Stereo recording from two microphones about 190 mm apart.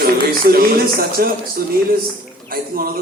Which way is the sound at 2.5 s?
50° right (ahead or behind).